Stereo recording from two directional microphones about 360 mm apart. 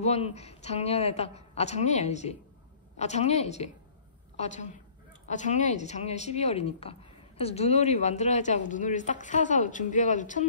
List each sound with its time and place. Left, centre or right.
0.0 s a woman's voice: centre